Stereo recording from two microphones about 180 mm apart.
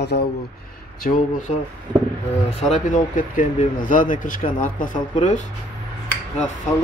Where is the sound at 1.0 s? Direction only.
50° left (ahead or behind).